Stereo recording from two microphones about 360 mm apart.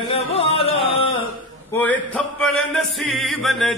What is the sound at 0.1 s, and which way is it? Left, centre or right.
Music, centre.